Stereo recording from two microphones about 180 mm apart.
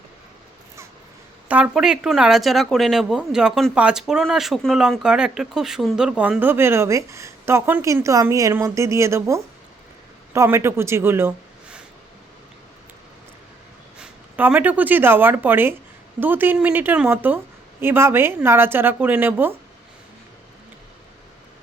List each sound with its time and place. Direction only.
1.5 s speech: 10° right (ahead or behind)
14.0 s a woman's voice: 10° right (ahead or behind)